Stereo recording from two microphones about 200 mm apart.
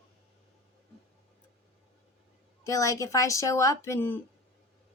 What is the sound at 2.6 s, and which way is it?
A woman's voice, 15° left (ahead or behind).